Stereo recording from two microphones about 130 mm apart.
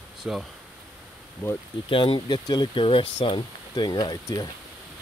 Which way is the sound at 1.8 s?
40° left (ahead or behind).